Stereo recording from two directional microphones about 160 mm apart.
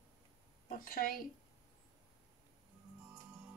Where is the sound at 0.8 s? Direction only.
65° left (ahead or behind).